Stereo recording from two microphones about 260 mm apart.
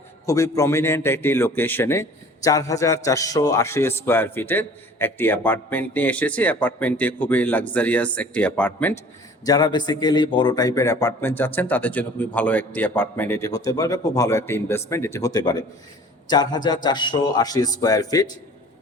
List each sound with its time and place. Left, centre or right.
0.3 s a man's voice: centre